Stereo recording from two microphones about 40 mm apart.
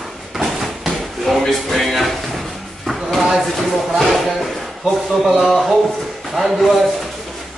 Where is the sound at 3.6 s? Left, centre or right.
Centre.